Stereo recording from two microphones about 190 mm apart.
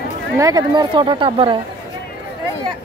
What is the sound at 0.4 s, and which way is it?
Speech, 20° right (ahead or behind).